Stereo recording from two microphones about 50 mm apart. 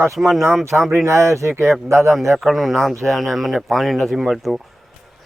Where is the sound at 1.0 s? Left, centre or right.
Right.